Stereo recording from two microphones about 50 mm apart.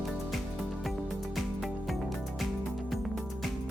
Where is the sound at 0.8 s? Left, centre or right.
Centre.